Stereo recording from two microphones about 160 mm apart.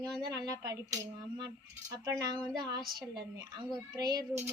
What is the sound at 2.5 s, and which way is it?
Speech, 25° right (ahead or behind).